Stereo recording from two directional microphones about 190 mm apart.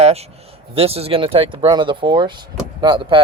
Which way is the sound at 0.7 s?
30° right (ahead or behind).